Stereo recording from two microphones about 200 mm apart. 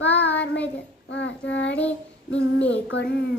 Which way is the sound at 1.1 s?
65° left (ahead or behind).